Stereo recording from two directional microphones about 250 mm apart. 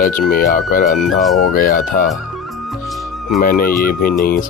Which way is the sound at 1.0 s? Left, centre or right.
Centre.